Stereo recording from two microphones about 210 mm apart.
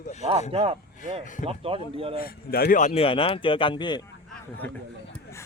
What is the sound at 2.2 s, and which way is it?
Speech, 45° left (ahead or behind).